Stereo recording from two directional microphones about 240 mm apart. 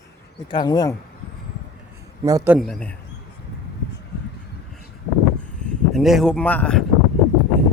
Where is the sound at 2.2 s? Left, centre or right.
Centre.